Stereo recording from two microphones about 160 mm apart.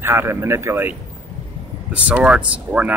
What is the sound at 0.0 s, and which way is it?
Speech, 15° right (ahead or behind).